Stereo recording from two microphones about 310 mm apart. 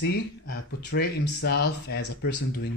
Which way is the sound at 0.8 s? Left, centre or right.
Left.